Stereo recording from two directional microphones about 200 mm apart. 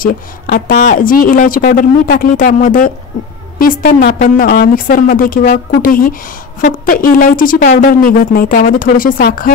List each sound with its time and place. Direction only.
0.0 s a woman's voice: 45° left (ahead or behind)